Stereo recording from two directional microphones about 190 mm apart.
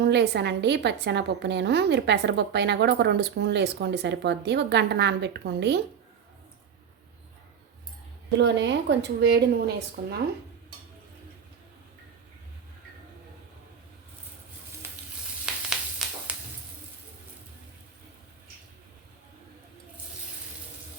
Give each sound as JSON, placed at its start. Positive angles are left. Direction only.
{"t": 0.0, "sound": "a woman's voice", "side_deg": -60}
{"t": 8.4, "sound": "a woman's voice", "side_deg": -65}
{"t": 14.8, "sound": "sizzle", "side_deg": -10}
{"t": 15.7, "sound": "a sound", "side_deg": 0}